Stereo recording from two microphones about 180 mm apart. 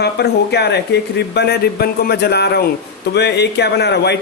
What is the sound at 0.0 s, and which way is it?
Speech, 65° left (ahead or behind).